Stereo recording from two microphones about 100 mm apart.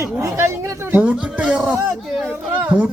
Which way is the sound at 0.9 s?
15° right (ahead or behind).